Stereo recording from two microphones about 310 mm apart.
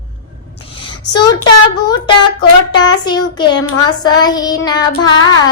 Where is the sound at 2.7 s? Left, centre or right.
Centre.